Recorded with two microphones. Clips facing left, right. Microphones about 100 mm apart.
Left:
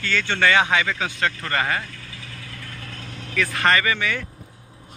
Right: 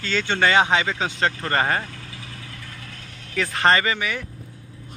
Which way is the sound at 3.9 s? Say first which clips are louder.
Left 1 dB; 20° right (ahead or behind).